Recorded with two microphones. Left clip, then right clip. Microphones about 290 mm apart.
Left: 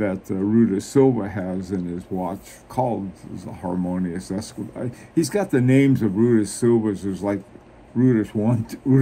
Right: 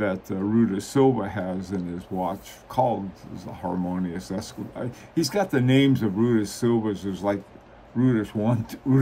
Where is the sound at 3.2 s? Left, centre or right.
Centre.